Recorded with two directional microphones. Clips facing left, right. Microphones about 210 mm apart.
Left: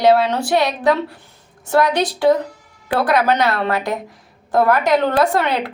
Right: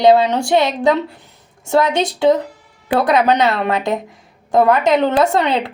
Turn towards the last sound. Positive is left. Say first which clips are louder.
# right 2 dB
turn(degrees=-20)  # may be behind; listen again after turning